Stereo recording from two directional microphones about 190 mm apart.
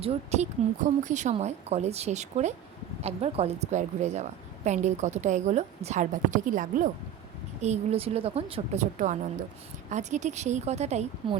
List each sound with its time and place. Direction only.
0.0 s a woman's voice: 35° right (ahead or behind)